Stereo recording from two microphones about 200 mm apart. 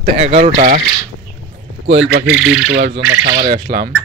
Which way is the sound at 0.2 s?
35° right (ahead or behind).